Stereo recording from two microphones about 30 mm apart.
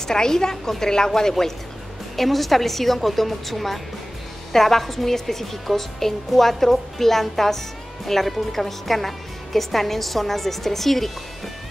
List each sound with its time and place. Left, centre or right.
0.0 s a woman's voice: left
2.1 s a woman's voice: centre